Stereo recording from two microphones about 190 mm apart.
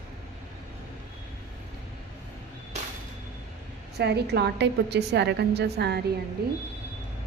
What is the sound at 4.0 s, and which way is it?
A woman's voice, 60° right (ahead or behind).